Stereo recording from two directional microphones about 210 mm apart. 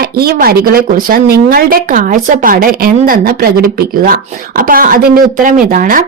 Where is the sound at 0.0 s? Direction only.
45° right (ahead or behind).